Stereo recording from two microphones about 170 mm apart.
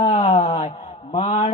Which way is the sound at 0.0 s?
40° left (ahead or behind).